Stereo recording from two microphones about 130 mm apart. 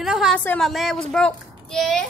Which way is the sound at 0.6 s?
Centre (ahead or behind).